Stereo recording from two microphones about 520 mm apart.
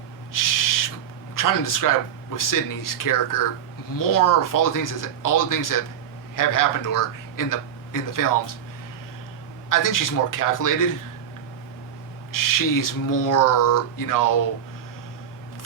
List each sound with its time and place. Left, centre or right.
0.3 s owl: left
1.4 s a man's voice: left
9.6 s speech: left
12.3 s speech: left